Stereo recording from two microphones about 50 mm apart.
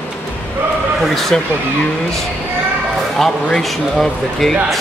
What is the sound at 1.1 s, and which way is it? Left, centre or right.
Speech, centre.